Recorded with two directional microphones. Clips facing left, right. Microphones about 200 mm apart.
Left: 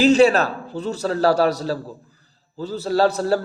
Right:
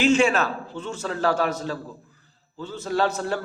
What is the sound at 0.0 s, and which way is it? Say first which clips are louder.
Speech: left 5 dB; 35° left (ahead or behind).